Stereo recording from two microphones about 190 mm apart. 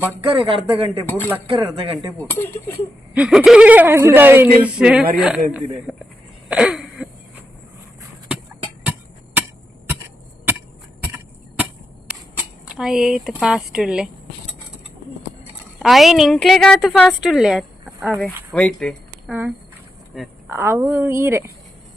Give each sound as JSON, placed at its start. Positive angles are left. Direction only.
{"t": 0.2, "sound": "speech", "side_deg": -30}
{"t": 2.2, "sound": "speech", "side_deg": 10}
{"t": 3.2, "sound": "a woman's voice", "side_deg": -5}
{"t": 6.5, "sound": "throat clearing", "side_deg": -5}
{"t": 12.6, "sound": "a woman's voice", "side_deg": 0}
{"t": 15.8, "sound": "a woman's voice", "side_deg": 0}
{"t": 19.3, "sound": "a woman's voice", "side_deg": -10}
{"t": 20.5, "sound": "speech", "side_deg": -15}